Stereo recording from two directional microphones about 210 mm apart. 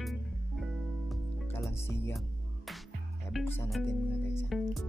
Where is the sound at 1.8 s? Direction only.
10° left (ahead or behind).